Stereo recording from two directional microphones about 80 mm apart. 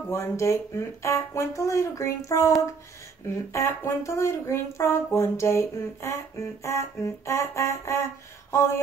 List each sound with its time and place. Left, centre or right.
0.1 s speech: left
3.5 s speech: left
8.5 s a sound: left